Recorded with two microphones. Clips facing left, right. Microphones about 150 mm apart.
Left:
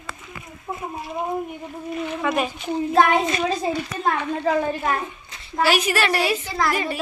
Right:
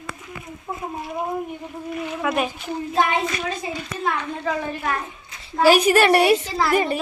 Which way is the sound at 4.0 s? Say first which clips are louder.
Left 2 dB; 40° left (ahead or behind).